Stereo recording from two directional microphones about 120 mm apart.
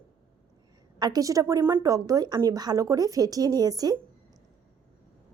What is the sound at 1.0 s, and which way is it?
A woman's voice, 30° right (ahead or behind).